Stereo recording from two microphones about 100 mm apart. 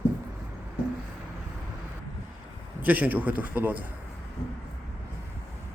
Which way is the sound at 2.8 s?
15° right (ahead or behind).